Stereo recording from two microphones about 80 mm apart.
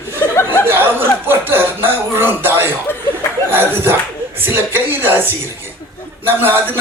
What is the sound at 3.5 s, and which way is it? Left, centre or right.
Clapping, right.